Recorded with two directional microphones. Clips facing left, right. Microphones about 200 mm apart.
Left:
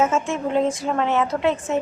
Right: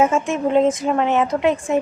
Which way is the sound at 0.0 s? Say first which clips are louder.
Right 3 dB; 15° right (ahead or behind).